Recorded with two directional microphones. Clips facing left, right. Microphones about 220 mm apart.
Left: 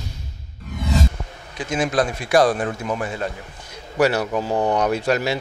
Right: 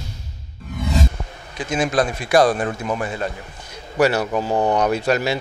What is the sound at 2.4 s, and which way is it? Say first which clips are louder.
Speech: right 1 dB; 30° right (ahead or behind).